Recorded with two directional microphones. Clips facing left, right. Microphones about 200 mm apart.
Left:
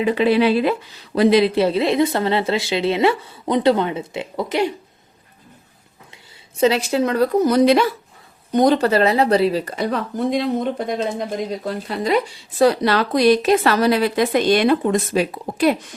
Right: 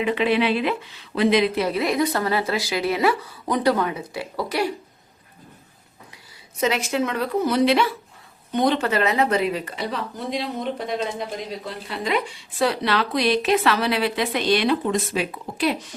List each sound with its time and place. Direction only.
0.0 s speech: 35° left (ahead or behind); by 4.7 s 20° left (ahead or behind)
6.6 s speech: 35° left (ahead or behind); by 16.0 s 50° left (ahead or behind)